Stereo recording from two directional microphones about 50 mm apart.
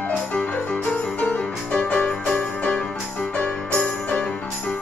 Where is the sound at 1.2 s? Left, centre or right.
Left.